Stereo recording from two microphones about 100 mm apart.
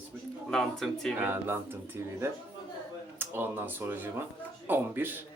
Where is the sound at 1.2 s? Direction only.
20° right (ahead or behind).